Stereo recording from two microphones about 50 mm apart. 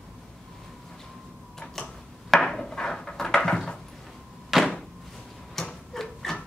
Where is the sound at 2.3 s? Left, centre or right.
Centre.